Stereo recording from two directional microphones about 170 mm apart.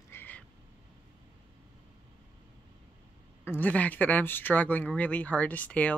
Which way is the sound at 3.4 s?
10° left (ahead or behind).